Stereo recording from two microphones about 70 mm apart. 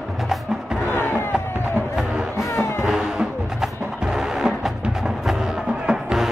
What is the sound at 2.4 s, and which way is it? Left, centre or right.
Music, left.